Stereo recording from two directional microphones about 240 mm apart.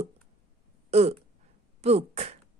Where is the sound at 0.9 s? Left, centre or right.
Right.